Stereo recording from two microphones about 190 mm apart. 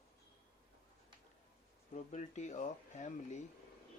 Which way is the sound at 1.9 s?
40° left (ahead or behind).